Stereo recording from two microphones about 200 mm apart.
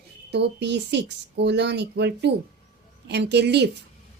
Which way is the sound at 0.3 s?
60° right (ahead or behind).